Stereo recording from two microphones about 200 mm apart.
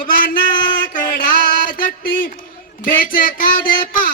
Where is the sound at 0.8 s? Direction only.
45° left (ahead or behind).